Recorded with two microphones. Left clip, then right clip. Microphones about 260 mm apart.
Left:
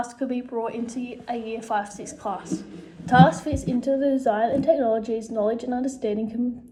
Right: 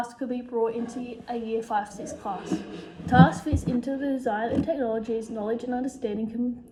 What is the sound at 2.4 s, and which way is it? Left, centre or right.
Speech, right.